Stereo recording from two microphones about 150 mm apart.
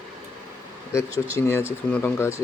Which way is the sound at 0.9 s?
20° left (ahead or behind).